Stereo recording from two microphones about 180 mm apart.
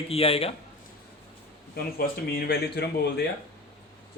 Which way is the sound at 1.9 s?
55° left (ahead or behind).